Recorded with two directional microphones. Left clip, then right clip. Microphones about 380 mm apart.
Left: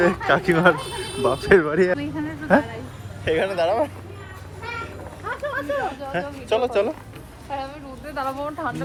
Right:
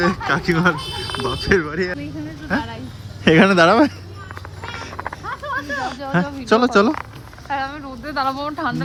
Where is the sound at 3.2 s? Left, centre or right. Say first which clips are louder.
Right 8 dB; centre.